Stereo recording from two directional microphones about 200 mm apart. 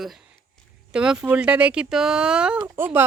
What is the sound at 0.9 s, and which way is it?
Speech, 5° right (ahead or behind).